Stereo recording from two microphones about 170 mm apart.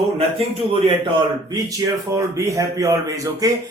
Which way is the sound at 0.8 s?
30° right (ahead or behind).